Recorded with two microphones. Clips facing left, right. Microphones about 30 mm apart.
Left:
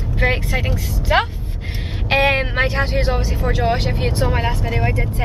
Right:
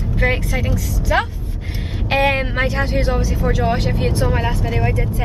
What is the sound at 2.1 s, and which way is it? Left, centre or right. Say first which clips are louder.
Speech: left 1 dB; centre.